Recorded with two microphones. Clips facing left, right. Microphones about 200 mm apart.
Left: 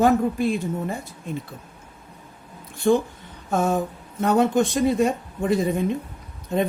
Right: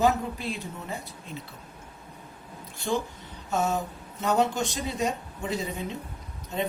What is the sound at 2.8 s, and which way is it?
Speech, 55° left (ahead or behind).